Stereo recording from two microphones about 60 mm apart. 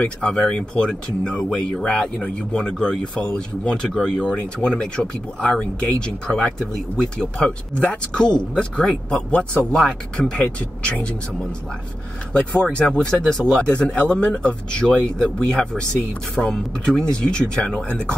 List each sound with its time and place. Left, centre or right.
0.2 s speech: centre
12.3 s speech: centre
13.6 s speech: centre